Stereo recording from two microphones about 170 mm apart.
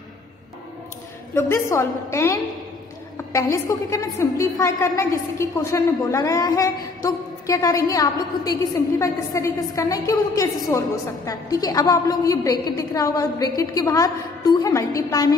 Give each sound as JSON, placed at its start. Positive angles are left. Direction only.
{"t": 1.3, "sound": "a woman's voice", "side_deg": 15}